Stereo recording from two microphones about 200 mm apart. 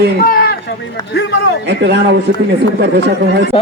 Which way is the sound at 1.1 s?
55° left (ahead or behind).